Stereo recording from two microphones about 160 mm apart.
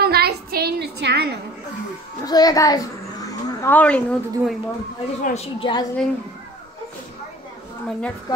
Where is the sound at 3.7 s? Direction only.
10° left (ahead or behind).